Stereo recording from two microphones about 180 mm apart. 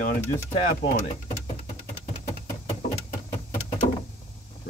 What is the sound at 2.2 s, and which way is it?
Knock, 40° left (ahead or behind).